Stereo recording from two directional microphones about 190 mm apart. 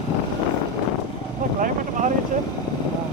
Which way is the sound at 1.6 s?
40° right (ahead or behind).